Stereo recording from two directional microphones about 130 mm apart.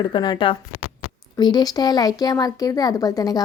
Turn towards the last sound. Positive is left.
turn(degrees=30)  # may be behind; listen again after turning